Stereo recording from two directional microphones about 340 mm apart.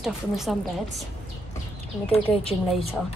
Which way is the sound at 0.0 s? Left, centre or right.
Centre.